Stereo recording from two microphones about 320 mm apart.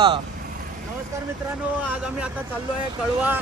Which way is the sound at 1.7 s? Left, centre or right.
Centre.